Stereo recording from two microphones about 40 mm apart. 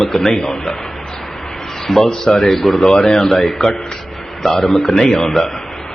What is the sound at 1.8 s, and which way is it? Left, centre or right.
Speech, centre.